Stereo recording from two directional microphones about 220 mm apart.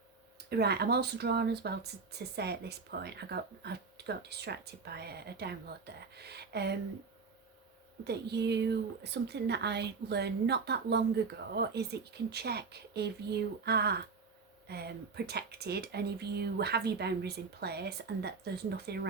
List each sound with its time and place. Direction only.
0.5 s speech: 45° right (ahead or behind)
8.0 s speech: 50° right (ahead or behind)